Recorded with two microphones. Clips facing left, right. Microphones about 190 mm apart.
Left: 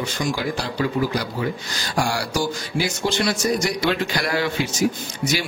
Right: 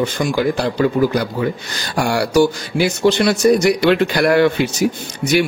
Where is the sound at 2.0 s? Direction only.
65° right (ahead or behind).